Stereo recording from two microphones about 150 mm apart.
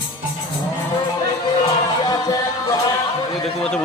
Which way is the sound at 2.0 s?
25° left (ahead or behind).